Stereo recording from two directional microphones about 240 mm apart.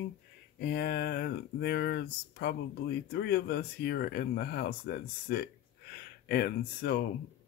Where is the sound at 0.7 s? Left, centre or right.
Left.